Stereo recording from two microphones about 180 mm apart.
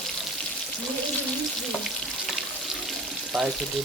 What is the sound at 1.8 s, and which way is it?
Frying, centre (ahead or behind).